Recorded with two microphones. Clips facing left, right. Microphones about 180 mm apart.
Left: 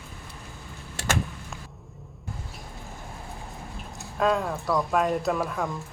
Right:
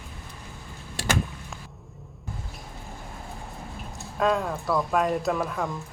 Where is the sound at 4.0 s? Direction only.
Centre (ahead or behind).